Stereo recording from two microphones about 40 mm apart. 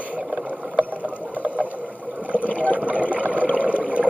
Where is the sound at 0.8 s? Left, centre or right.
Right.